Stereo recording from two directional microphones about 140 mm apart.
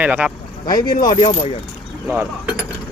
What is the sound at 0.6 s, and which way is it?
Speech, 30° left (ahead or behind).